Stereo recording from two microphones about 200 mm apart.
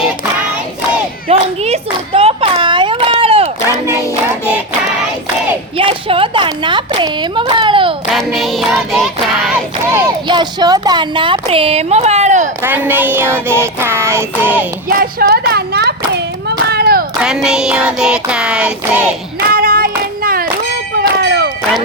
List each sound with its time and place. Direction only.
1.3 s clapping: 30° right (ahead or behind)
4.0 s child singing: 10° left (ahead or behind)
5.7 s a sound: 25° right (ahead or behind)
8.1 s child singing: centre (ahead or behind)
10.2 s speech: 20° right (ahead or behind)
12.6 s child singing: 10° right (ahead or behind)
14.8 s clapping: 50° right (ahead or behind)
17.2 s child singing: 5° right (ahead or behind)
19.5 s child singing: 45° right (ahead or behind)
20.2 s a sound: 45° right (ahead or behind)
21.2 s music: 55° right (ahead or behind)